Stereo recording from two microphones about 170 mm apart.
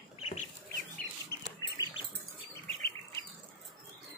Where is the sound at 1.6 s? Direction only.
20° left (ahead or behind).